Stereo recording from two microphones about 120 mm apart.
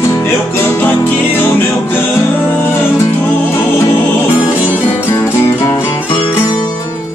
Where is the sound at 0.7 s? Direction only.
15° left (ahead or behind).